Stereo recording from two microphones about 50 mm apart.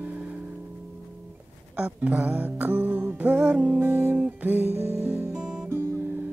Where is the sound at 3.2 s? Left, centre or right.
Right.